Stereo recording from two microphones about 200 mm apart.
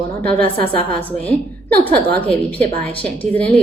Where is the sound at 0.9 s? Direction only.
10° left (ahead or behind).